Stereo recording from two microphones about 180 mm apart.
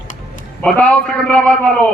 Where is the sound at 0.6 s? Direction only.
10° left (ahead or behind).